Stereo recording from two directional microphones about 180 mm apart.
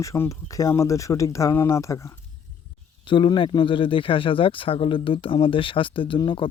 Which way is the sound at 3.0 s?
30° left (ahead or behind).